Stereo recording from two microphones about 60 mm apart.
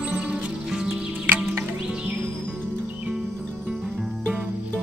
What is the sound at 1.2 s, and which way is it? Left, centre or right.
Music, right.